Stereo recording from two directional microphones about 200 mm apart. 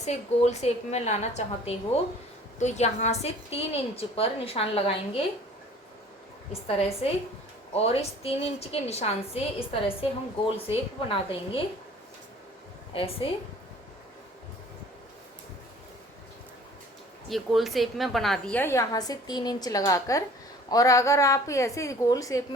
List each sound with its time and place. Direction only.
0.0 s a woman's voice: 35° left (ahead or behind)
6.5 s a woman's voice: 30° left (ahead or behind)
12.9 s a woman's voice: 25° left (ahead or behind)
17.2 s a woman's voice: centre (ahead or behind); by 22.4 s 15° left (ahead or behind)